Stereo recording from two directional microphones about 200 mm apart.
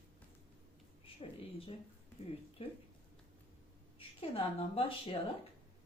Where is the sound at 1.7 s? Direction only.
25° left (ahead or behind).